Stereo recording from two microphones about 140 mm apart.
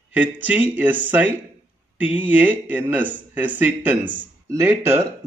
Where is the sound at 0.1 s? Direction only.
10° right (ahead or behind).